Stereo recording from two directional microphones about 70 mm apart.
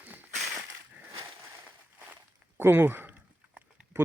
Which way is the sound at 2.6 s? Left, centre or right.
Right.